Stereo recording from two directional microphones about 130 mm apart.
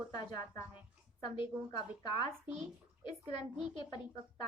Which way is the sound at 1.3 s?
40° left (ahead or behind).